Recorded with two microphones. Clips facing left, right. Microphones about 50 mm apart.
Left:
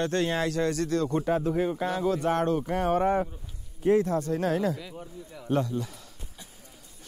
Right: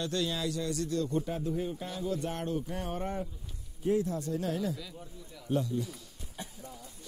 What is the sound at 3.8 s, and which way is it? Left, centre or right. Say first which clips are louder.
Speech: left 7 dB; left.